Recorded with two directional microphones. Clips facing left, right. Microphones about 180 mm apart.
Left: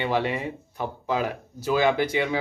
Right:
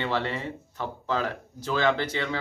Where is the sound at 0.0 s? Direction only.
15° left (ahead or behind).